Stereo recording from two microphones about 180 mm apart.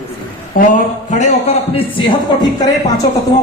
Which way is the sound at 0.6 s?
50° left (ahead or behind).